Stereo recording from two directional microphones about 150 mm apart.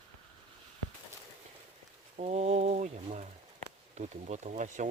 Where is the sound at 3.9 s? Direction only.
50° right (ahead or behind).